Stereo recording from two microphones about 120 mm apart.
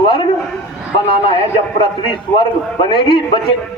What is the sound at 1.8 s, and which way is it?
A man's voice, 45° left (ahead or behind).